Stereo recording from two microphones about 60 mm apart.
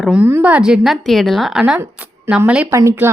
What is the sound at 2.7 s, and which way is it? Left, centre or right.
Speech, right.